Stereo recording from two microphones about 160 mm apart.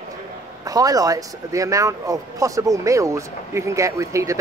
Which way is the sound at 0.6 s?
20° right (ahead or behind).